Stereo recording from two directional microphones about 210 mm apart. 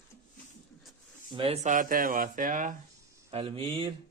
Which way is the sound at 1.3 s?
25° right (ahead or behind).